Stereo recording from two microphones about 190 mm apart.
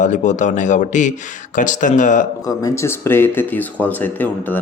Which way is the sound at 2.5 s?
15° left (ahead or behind).